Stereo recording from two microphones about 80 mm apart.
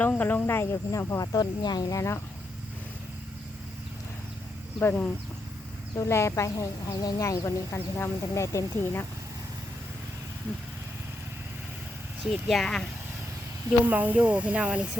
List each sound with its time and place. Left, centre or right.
0.2 s speech: left
0.9 s speech: left
2.0 s speech: left
4.8 s speech: left
6.0 s speech: left
7.9 s speech: left
12.2 s speech: centre
13.8 s speech: right